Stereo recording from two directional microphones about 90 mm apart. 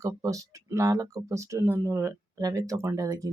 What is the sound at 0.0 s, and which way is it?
Speech, 40° right (ahead or behind).